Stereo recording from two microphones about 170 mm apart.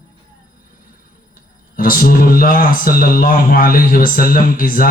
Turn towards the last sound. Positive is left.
turn(degrees=55)  # may be behind; listen again after turning